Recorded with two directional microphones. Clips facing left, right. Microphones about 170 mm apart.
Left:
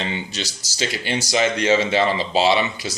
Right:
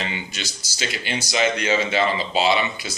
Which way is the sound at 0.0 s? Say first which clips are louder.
Left 3 dB; 30° left (ahead or behind).